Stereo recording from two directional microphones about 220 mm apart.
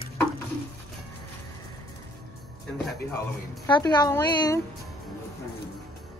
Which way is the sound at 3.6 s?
20° left (ahead or behind).